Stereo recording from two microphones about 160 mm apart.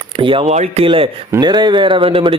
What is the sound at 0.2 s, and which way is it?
Speech, 30° right (ahead or behind).